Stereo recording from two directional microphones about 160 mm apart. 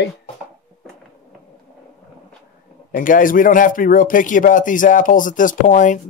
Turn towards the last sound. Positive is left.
turn(degrees=55)  # may be behind; listen again after turning